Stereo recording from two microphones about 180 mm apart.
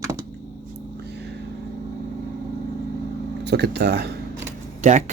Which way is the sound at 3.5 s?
70° right (ahead or behind).